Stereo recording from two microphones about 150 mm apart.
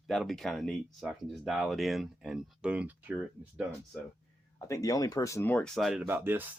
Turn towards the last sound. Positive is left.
turn(degrees=-15)  # may be behind; listen again after turning